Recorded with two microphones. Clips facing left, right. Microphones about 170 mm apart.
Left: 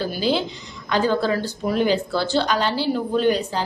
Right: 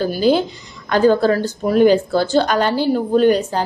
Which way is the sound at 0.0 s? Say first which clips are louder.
Right 6 dB; 45° right (ahead or behind).